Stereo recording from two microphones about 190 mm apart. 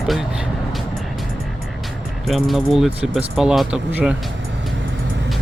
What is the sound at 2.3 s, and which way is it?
Speech, centre (ahead or behind).